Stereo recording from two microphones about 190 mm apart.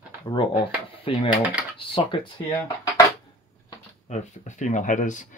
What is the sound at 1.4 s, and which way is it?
Speech, 5° right (ahead or behind).